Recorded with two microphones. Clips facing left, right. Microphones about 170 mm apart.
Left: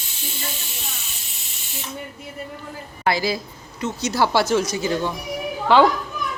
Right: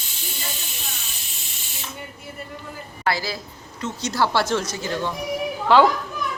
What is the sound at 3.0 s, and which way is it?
Speech, 15° left (ahead or behind).